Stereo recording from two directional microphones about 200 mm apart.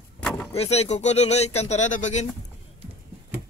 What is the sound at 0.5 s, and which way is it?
Speech, 30° left (ahead or behind).